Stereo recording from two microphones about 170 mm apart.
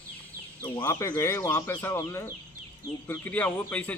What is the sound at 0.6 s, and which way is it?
A man's voice, 15° left (ahead or behind).